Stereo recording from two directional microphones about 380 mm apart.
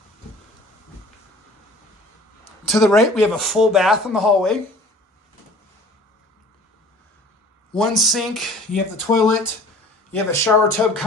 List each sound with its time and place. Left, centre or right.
2.6 s speech: centre
7.7 s speech: centre